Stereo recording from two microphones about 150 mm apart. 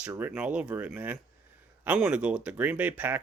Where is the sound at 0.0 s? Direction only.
15° right (ahead or behind).